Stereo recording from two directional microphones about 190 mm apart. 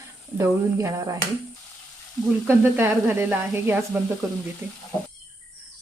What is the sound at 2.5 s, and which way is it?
Speech, 10° right (ahead or behind).